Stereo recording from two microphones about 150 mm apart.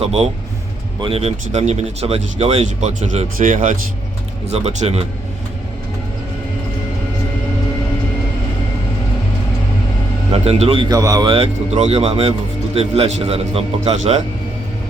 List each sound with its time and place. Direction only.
0.0 s speech: 45° right (ahead or behind)
3.3 s speech: 60° right (ahead or behind)
4.4 s speech: 45° right (ahead or behind)
10.3 s a man's voice: 45° right (ahead or behind)
10.9 s speech: 25° right (ahead or behind)
11.7 s a man's voice: 45° right (ahead or behind)